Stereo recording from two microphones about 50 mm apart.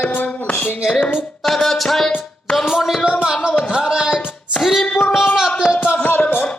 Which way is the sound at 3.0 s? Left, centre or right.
Centre.